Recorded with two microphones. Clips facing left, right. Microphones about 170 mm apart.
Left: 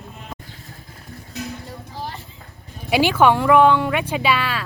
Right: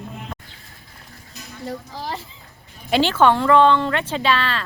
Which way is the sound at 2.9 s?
10° left (ahead or behind).